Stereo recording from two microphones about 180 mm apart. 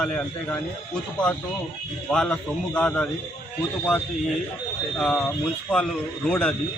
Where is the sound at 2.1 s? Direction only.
5° left (ahead or behind).